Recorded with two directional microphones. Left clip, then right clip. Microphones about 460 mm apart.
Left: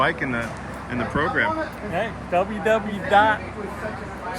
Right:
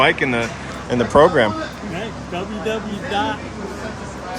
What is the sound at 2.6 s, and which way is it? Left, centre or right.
Speech, centre.